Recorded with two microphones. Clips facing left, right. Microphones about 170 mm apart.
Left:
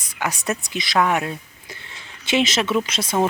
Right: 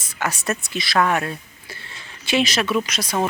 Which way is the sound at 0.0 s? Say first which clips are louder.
Even; 15° left (ahead or behind).